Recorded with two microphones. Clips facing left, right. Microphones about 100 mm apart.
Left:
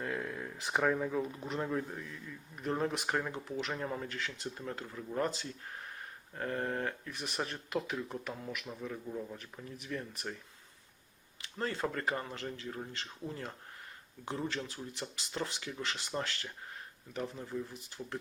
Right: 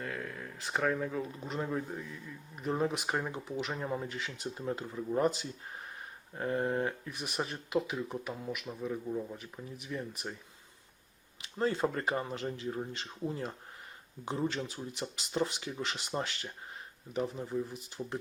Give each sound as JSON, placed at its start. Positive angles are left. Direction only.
{"t": 0.0, "sound": "a sound", "side_deg": 15}
{"t": 0.5, "sound": "speech", "side_deg": 15}
{"t": 11.5, "sound": "speech", "side_deg": -20}
{"t": 14.5, "sound": "speech", "side_deg": -20}